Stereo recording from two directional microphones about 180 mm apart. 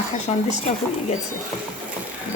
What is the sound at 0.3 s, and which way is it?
Speech, 35° left (ahead or behind).